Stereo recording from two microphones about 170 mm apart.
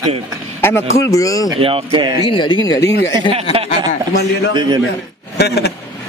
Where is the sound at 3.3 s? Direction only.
30° right (ahead or behind).